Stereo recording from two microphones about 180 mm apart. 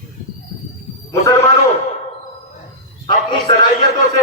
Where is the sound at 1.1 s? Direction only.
15° left (ahead or behind).